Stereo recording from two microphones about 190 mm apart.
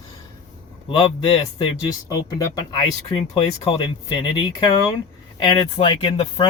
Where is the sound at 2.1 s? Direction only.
20° left (ahead or behind).